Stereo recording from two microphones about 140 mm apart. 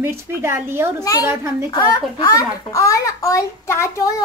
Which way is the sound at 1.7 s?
30° left (ahead or behind).